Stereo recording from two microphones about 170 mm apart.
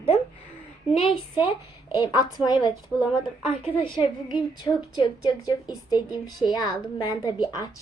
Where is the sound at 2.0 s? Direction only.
25° left (ahead or behind).